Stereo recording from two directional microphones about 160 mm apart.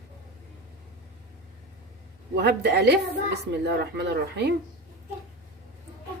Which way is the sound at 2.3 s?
90° right.